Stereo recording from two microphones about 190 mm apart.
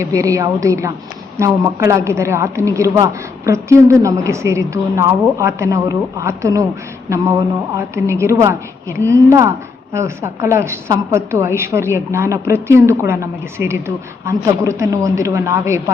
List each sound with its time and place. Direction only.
0.0 s a woman's voice: 15° right (ahead or behind)
7.8 s a woman's voice: 15° right (ahead or behind)